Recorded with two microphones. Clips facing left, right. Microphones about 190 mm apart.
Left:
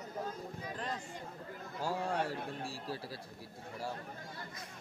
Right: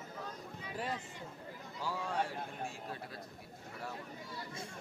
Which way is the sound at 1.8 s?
45° left (ahead or behind).